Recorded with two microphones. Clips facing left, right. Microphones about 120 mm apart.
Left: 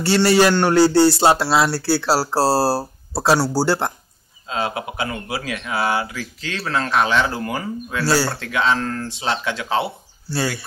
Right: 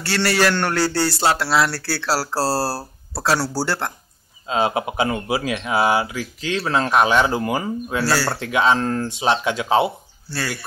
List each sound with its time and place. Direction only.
0.0 s a man's voice: 20° left (ahead or behind)
4.5 s speech: 20° right (ahead or behind)